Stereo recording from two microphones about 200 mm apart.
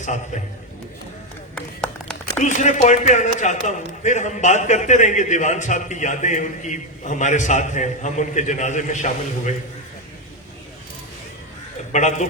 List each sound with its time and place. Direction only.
1.5 s a sound: 5° left (ahead or behind)
2.4 s a man's voice: 35° left (ahead or behind)
11.9 s a man's voice: 35° left (ahead or behind)